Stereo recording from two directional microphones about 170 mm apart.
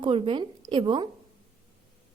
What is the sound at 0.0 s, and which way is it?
A woman's voice, 30° right (ahead or behind).